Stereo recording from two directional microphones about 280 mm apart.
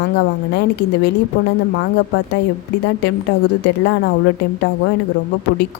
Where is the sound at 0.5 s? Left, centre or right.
Left.